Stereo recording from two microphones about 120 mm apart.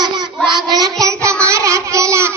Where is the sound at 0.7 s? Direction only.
30° right (ahead or behind).